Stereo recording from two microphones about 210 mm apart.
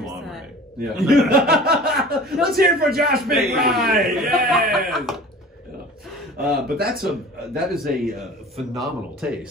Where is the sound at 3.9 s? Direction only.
Centre (ahead or behind).